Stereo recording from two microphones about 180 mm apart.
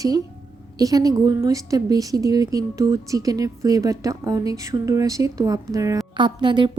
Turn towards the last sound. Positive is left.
turn(degrees=-25)  # may be behind; listen again after turning